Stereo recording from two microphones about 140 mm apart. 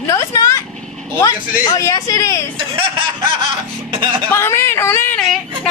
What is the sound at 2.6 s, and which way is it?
Speech, 40° right (ahead or behind).